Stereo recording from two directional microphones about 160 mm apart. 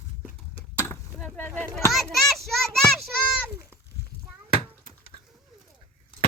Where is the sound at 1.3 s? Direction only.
10° left (ahead or behind).